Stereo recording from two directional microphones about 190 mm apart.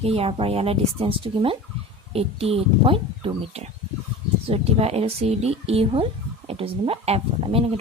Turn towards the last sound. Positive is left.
turn(degrees=-30)  # may be behind; listen again after turning